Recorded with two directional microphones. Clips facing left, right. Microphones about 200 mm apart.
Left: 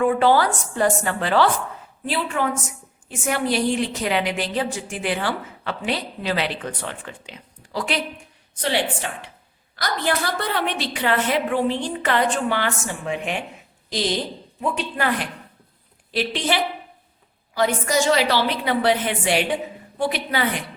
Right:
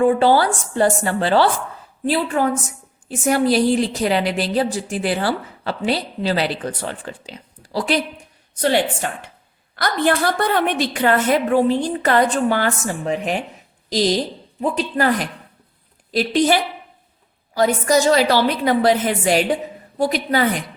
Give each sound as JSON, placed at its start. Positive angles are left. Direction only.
{"t": 0.0, "sound": "a woman's voice", "side_deg": -30}
{"t": 8.6, "sound": "a woman's voice", "side_deg": -45}